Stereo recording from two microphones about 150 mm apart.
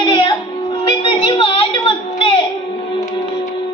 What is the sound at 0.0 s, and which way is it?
Music, 30° left (ahead or behind).